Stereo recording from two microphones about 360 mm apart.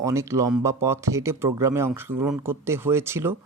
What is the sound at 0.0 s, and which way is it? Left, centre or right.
Speech, centre.